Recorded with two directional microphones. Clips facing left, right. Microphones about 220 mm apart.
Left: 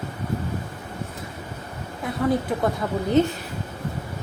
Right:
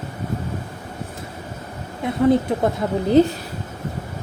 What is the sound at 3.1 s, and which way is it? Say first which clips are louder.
Speech: right 5 dB; 35° right (ahead or behind).